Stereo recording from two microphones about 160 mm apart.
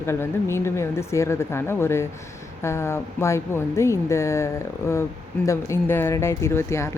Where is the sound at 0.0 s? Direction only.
15° left (ahead or behind).